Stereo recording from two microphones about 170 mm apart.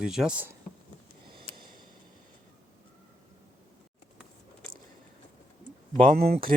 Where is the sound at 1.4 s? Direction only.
60° right (ahead or behind).